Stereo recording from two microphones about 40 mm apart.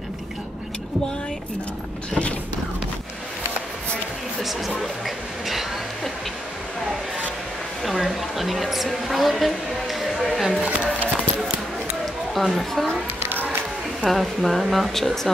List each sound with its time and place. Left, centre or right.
4.4 s speech: centre
7.8 s a woman's voice: centre
12.4 s a woman's voice: centre
13.2 s music: right
14.0 s a woman's voice: centre